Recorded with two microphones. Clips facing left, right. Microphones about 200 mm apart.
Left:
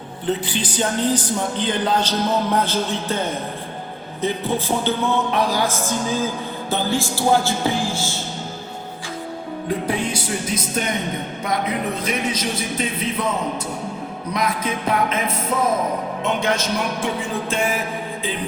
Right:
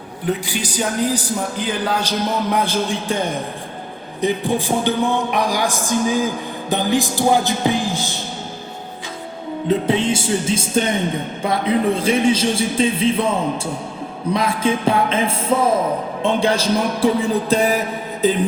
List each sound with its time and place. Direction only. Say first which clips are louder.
0.3 s speech: right 1 dB; 10° right (ahead or behind)
9.6 s speech: right 6 dB; 25° right (ahead or behind)
14.3 s a man's voice: right 4 dB; 30° right (ahead or behind)